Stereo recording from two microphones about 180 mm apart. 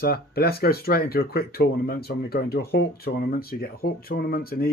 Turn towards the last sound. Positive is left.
turn(degrees=55)  # may be behind; listen again after turning